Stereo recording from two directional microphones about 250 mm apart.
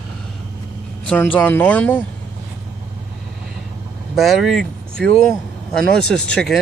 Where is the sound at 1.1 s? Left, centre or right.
Centre.